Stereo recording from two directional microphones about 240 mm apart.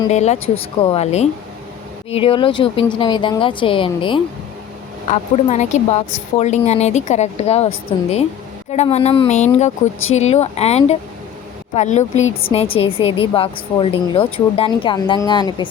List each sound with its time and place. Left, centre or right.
0.1 s a woman's voice: left